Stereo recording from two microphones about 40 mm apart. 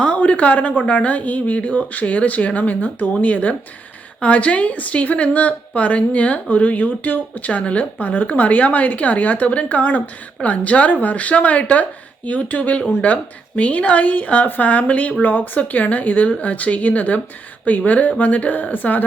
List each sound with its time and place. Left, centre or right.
0.2 s a woman's voice: left